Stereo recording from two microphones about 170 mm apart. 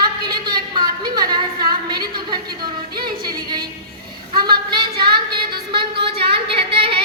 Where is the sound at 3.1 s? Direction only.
25° right (ahead or behind).